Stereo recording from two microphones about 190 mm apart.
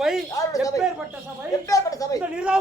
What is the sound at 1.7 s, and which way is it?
Speech, 20° left (ahead or behind).